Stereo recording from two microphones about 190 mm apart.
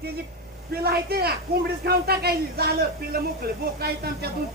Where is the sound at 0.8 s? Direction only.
55° right (ahead or behind).